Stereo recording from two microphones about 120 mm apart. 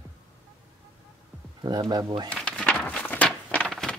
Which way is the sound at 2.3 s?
10° left (ahead or behind).